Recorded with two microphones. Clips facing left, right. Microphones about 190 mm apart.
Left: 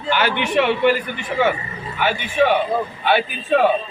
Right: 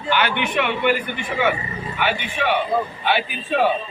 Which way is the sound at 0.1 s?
40° left (ahead or behind).